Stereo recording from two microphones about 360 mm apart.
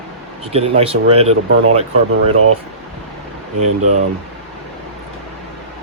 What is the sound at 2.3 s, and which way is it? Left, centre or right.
Speech, right.